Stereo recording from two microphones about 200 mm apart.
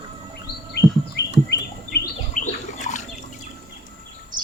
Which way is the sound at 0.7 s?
60° left (ahead or behind).